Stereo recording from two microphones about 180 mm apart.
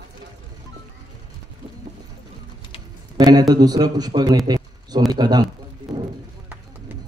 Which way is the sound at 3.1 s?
20° right (ahead or behind).